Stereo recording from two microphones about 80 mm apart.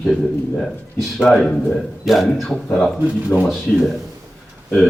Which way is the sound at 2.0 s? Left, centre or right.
Centre.